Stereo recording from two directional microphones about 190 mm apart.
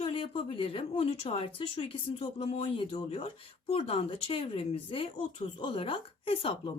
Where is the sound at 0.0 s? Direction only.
25° left (ahead or behind).